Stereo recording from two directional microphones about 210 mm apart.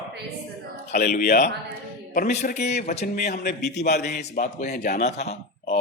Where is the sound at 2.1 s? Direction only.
35° left (ahead or behind).